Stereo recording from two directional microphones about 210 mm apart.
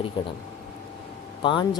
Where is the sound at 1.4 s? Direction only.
25° left (ahead or behind).